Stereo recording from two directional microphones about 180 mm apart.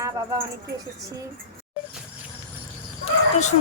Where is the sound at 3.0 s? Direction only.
40° left (ahead or behind).